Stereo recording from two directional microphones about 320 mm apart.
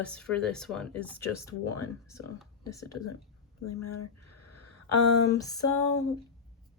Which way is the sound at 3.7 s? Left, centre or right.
Left.